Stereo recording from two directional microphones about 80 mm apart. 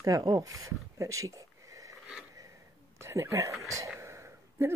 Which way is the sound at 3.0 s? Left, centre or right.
Right.